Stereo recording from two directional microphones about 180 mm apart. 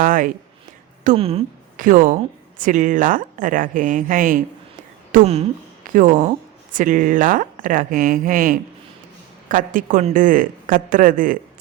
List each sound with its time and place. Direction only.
0.0 s speech: 50° right (ahead or behind)
1.1 s speech: 30° right (ahead or behind)
1.7 s speech: 50° right (ahead or behind)
5.1 s speech: 35° right (ahead or behind)
5.9 s speech: 45° right (ahead or behind)